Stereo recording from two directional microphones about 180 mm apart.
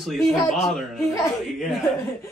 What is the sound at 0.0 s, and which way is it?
Speech, centre (ahead or behind).